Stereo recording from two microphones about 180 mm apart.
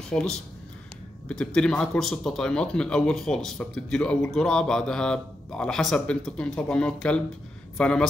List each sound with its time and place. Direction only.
0.1 s speech: 5° left (ahead or behind)